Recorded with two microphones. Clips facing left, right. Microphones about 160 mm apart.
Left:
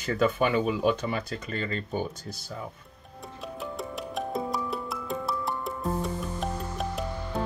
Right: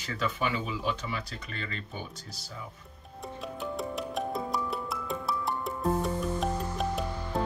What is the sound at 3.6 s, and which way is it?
Music, centre (ahead or behind).